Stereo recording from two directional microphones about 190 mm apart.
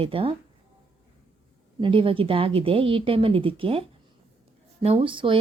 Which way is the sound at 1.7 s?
25° right (ahead or behind).